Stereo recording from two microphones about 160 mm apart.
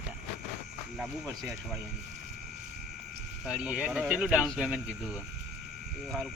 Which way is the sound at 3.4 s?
5° right (ahead or behind).